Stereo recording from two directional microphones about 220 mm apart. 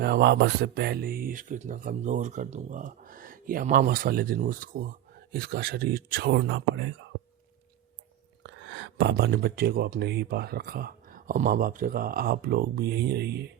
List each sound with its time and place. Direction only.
0.0 s speech: 50° right (ahead or behind)
8.4 s speech: 55° right (ahead or behind)